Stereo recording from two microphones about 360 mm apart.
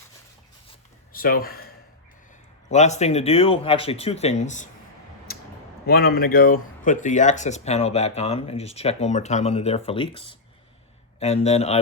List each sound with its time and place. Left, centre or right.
1.1 s speech: left
2.6 s speech: centre
5.3 s a sound: left
5.8 s speech: left